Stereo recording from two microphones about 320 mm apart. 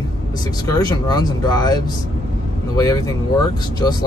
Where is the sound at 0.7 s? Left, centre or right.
Centre.